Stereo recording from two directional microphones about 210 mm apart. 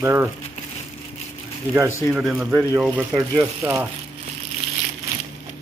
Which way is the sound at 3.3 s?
10° right (ahead or behind).